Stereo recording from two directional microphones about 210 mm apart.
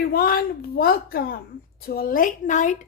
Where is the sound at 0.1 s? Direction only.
45° left (ahead or behind).